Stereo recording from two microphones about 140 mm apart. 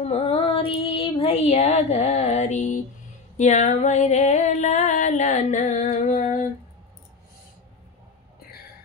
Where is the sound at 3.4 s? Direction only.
55° left (ahead or behind).